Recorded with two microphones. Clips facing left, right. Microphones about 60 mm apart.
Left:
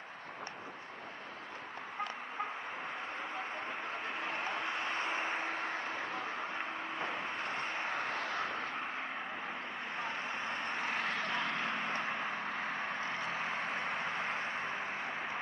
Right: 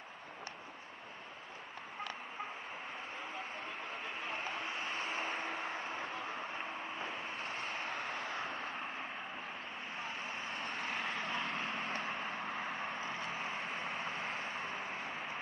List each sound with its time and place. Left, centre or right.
4.2 s a sound: left
5.5 s vehicle: left
9.9 s vehicle: left
11.1 s vehicle: left
11.9 s vehicle: left
12.6 s vehicle: left
13.0 s vehicle: left
14.2 s vehicle: left